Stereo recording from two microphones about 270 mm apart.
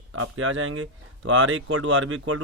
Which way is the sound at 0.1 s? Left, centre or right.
Right.